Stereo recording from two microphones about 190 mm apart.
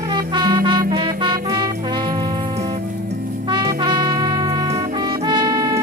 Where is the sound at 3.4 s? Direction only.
20° right (ahead or behind).